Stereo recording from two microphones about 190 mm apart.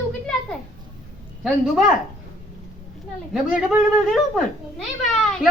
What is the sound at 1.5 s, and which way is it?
Speech, 5° right (ahead or behind).